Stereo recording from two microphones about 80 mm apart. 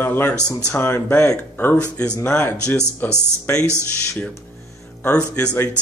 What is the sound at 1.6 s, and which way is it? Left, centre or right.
Speech, centre.